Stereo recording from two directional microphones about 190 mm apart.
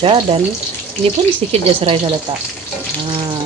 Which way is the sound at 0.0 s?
25° right (ahead or behind).